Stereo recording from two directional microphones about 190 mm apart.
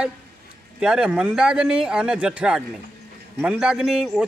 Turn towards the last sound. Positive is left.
turn(degrees=0)  # may be behind; listen again after turning